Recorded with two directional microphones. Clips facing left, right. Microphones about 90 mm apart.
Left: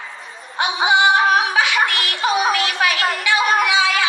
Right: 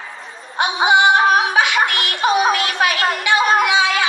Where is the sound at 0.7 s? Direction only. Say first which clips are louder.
Right 2 dB; 20° right (ahead or behind).